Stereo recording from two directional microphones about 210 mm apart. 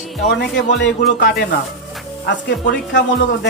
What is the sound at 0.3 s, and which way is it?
Speech, 55° left (ahead or behind).